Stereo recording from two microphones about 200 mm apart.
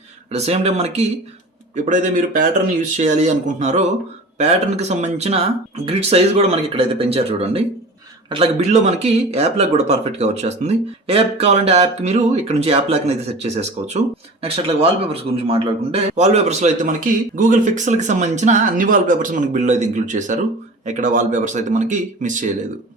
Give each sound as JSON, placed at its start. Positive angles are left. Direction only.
{"t": 0.3, "sound": "a man's voice", "side_deg": -30}